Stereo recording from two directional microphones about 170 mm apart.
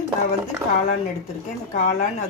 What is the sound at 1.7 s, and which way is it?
Speech, 50° left (ahead or behind).